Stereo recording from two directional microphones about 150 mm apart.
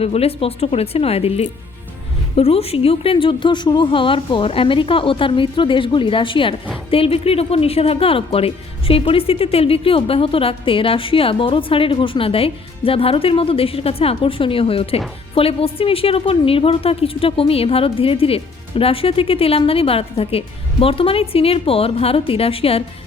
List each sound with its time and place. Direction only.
0.0 s speech: 40° left (ahead or behind)